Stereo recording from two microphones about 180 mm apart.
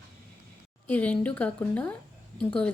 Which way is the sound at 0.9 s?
10° left (ahead or behind).